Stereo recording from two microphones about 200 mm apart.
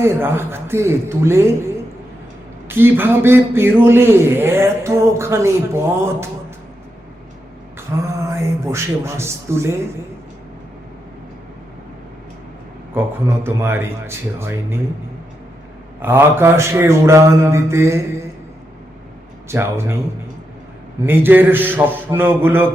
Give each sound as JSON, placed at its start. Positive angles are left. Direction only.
{"t": 0.0, "sound": "a man's voice", "side_deg": -10}
{"t": 7.9, "sound": "a man's voice", "side_deg": -15}
{"t": 12.9, "sound": "a man's voice", "side_deg": -10}
{"t": 16.0, "sound": "a man's voice", "side_deg": -10}
{"t": 19.5, "sound": "a man's voice", "side_deg": -15}
{"t": 21.1, "sound": "a man's voice", "side_deg": -10}